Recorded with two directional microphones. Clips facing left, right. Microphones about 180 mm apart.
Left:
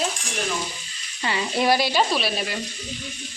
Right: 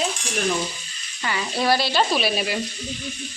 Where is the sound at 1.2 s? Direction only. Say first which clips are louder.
Left 1 dB; 20° left (ahead or behind).